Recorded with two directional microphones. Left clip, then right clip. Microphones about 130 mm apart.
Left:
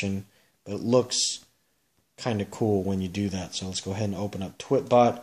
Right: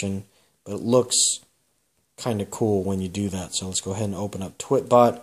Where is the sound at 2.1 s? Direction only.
35° right (ahead or behind).